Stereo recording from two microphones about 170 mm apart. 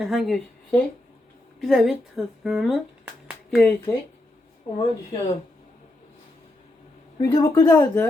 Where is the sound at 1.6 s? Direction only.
Centre (ahead or behind).